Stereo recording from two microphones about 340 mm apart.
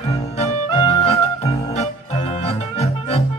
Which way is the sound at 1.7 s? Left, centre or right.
Centre.